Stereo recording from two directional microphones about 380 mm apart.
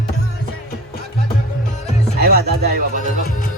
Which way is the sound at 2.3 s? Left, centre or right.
Right.